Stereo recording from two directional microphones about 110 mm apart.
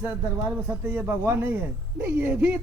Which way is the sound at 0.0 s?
20° right (ahead or behind).